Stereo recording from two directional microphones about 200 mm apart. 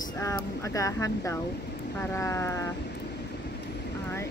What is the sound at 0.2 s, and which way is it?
Speech, 15° left (ahead or behind).